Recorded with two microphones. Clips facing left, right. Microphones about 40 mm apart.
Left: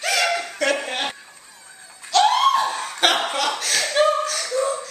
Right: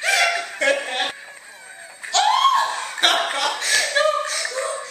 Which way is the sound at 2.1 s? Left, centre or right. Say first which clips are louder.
Left 1 dB; centre.